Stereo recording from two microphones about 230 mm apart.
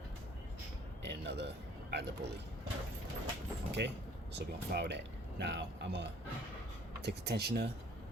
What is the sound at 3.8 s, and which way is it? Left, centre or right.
Speech, right.